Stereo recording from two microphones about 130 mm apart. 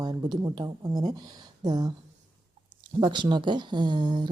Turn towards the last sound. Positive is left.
turn(degrees=-35)  # may be behind; listen again after turning